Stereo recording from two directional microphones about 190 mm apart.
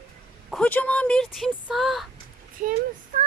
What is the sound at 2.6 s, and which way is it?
Speech, 45° right (ahead or behind).